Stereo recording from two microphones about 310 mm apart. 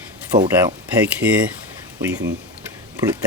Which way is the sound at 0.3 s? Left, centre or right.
Centre.